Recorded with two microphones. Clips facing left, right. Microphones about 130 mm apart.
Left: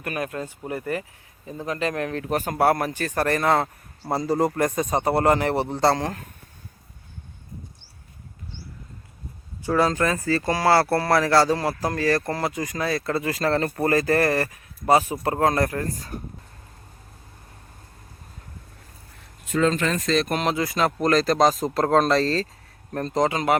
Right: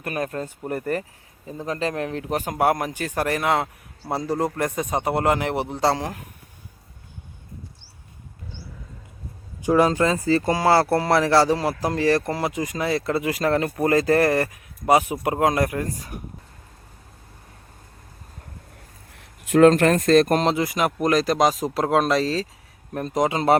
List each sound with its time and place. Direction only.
0.0 s speech: 35° right (ahead or behind)
1.5 s speech: 30° right (ahead or behind); by 6.2 s 10° right (ahead or behind)
9.6 s speech: 15° right (ahead or behind)
19.5 s speech: 65° right (ahead or behind); by 20.4 s 50° right (ahead or behind)
20.4 s speech: 25° right (ahead or behind)